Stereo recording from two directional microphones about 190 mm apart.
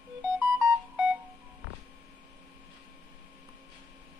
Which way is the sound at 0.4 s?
10° right (ahead or behind).